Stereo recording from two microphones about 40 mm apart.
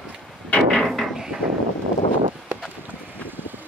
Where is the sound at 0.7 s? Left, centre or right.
Centre.